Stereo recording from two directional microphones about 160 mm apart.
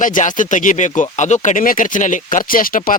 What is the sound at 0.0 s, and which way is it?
Speech, 55° left (ahead or behind).